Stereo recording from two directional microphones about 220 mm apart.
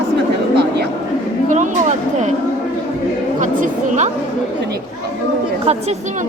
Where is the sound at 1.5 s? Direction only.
35° right (ahead or behind).